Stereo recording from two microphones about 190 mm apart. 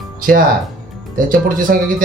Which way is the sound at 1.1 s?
45° right (ahead or behind).